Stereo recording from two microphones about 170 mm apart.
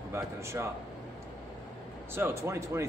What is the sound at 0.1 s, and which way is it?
Speech, 15° right (ahead or behind).